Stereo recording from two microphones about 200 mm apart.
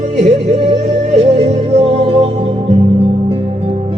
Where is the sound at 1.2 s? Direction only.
30° right (ahead or behind).